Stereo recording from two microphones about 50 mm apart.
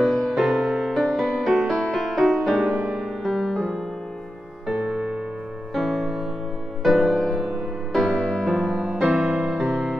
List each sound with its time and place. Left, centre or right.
0.0 s music: centre
4.8 s music: right
5.8 s music: centre
8.2 s music: centre
8.5 s music: centre
9.0 s music: centre